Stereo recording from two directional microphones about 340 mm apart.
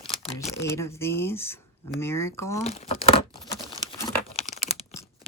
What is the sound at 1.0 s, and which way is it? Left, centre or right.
Speech, centre.